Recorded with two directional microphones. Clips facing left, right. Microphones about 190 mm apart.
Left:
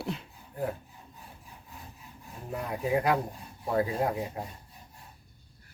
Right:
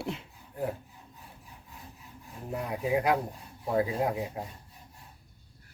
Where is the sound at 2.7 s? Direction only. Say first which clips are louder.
Even; 15° right (ahead or behind).